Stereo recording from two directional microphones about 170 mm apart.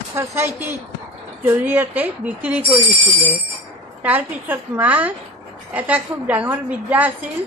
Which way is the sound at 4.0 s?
10° right (ahead or behind).